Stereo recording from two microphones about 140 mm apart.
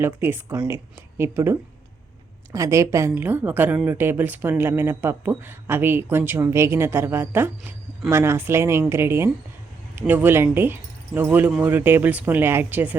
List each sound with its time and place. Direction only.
0.0 s speech: 15° right (ahead or behind)